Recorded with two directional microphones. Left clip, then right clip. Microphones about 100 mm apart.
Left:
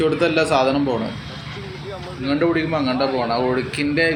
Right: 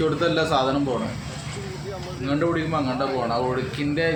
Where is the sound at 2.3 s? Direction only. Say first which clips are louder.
Left 4 dB; 30° left (ahead or behind).